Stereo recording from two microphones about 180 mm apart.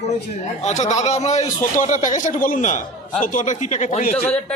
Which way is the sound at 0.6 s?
40° left (ahead or behind).